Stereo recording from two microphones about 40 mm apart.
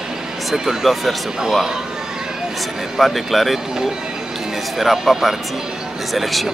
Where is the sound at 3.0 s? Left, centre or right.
Centre.